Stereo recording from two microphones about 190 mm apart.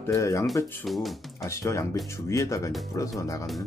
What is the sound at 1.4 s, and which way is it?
Speech, 15° left (ahead or behind).